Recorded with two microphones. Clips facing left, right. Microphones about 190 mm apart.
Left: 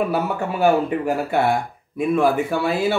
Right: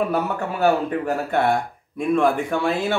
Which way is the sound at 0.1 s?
10° left (ahead or behind).